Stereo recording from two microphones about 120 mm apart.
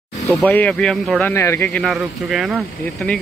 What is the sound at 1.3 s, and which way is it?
Speech, 25° left (ahead or behind).